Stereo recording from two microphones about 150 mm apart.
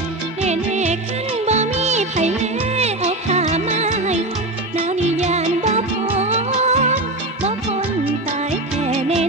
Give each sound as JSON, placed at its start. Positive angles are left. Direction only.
{"t": 0.5, "sound": "music", "side_deg": -50}
{"t": 8.5, "sound": "music", "side_deg": -50}